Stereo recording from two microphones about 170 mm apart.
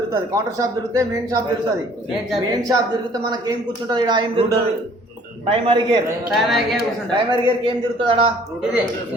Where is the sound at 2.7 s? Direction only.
25° right (ahead or behind).